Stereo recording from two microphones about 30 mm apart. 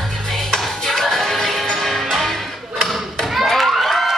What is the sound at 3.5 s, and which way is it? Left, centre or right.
Crowd, centre.